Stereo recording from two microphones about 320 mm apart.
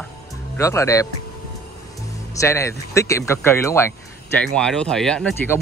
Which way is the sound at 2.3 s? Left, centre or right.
Centre.